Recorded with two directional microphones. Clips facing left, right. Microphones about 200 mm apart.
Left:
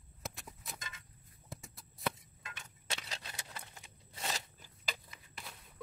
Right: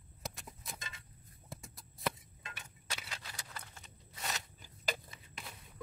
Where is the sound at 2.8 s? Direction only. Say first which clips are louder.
Left 2 dB; 25° left (ahead or behind).